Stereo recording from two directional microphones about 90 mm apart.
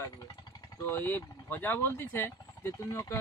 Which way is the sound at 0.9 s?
25° left (ahead or behind).